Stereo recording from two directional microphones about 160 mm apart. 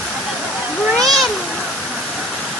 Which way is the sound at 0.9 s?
Centre (ahead or behind).